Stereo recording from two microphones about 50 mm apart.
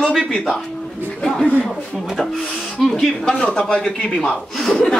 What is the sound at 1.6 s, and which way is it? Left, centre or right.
A child's voice, centre.